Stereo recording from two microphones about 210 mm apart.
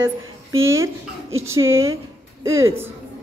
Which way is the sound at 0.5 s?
70° right (ahead or behind).